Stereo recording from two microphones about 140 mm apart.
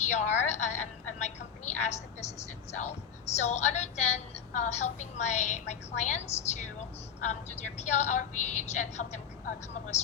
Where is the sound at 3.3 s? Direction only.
55° left (ahead or behind).